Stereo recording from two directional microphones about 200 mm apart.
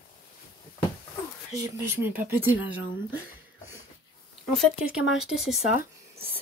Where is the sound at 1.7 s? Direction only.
10° right (ahead or behind).